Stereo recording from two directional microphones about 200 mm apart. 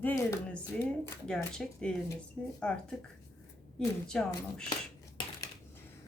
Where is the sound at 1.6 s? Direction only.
5° left (ahead or behind).